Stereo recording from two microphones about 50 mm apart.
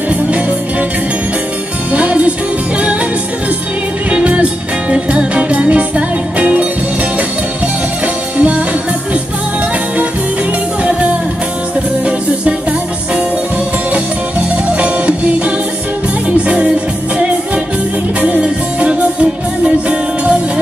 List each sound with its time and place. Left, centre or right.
0.1 s music: right
1.9 s music: right
4.1 s music: right
8.4 s music: right
10.8 s music: right
14.8 s music: right
18.4 s music: right